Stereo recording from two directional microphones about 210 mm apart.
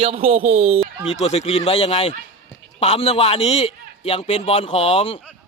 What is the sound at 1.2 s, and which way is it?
A man's voice, 30° left (ahead or behind).